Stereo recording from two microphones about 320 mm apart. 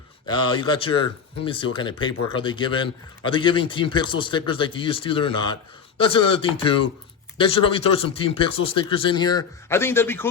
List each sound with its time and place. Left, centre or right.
0.3 s a man's voice: centre